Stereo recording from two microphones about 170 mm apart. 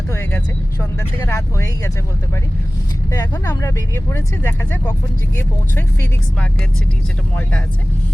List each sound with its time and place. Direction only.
0.1 s speech: 10° left (ahead or behind)
3.1 s speech: 20° left (ahead or behind)